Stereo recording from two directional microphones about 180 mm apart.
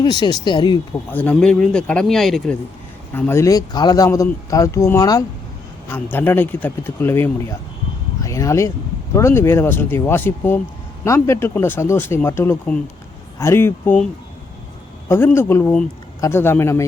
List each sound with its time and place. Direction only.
0.0 s speech: 25° left (ahead or behind)
1.1 s speech: 10° left (ahead or behind)
3.1 s speech: 10° left (ahead or behind)
15.4 s speech: 15° left (ahead or behind)